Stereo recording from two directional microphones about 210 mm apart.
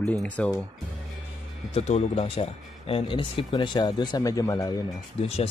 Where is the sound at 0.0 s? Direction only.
5° left (ahead or behind).